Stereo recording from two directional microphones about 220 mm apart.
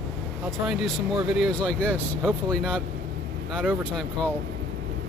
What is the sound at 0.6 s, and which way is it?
Speech, centre (ahead or behind).